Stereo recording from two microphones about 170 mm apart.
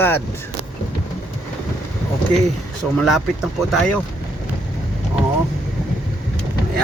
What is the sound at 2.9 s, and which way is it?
Speech, 5° right (ahead or behind).